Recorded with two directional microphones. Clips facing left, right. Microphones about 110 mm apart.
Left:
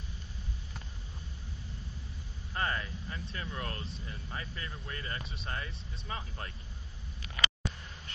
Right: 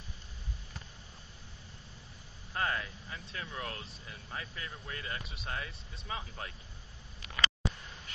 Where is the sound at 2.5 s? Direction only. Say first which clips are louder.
Even; centre (ahead or behind).